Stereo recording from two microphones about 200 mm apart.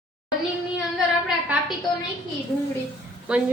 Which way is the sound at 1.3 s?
5° right (ahead or behind).